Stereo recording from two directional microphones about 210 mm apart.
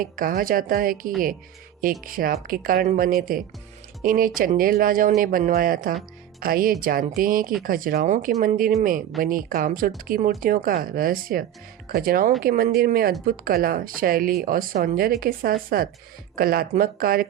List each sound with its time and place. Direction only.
0.0 s speech: 40° right (ahead or behind)